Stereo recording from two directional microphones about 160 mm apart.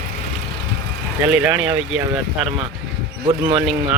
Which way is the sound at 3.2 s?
35° right (ahead or behind).